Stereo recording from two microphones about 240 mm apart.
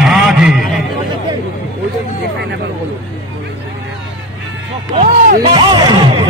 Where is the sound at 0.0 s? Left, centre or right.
Centre.